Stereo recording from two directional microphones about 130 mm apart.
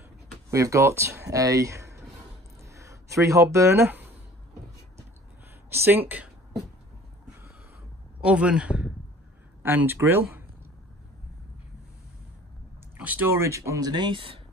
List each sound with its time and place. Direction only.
0.5 s speech: 25° right (ahead or behind)
5.7 s speech: 15° right (ahead or behind)
8.2 s speech: 10° right (ahead or behind)
12.9 s speech: 15° right (ahead or behind); by 14.4 s 40° right (ahead or behind)